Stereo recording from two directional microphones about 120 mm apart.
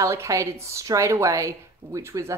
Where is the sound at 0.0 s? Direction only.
25° right (ahead or behind).